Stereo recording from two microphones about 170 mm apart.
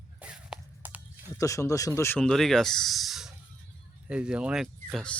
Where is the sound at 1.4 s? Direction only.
20° left (ahead or behind).